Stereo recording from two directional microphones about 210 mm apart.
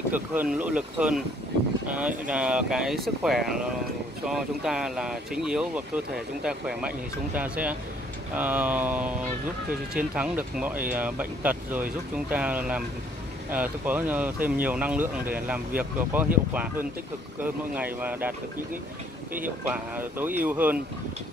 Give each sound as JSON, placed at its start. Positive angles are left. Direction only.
{"t": 0.1, "sound": "speech", "side_deg": -10}
{"t": 19.4, "sound": "speech", "side_deg": -10}